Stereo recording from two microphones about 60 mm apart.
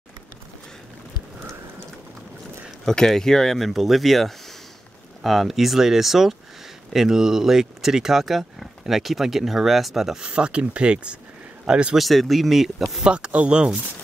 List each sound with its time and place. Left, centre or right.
2.8 s speech: centre
10.3 s speech: centre
12.0 s speech: centre
13.0 s speech: centre